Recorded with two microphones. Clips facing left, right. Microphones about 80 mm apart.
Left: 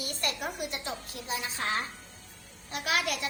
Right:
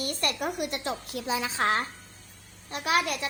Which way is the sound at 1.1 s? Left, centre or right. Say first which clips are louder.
Right 8 dB; right.